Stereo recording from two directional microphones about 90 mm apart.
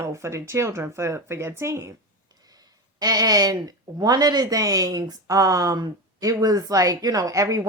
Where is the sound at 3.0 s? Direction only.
45° right (ahead or behind).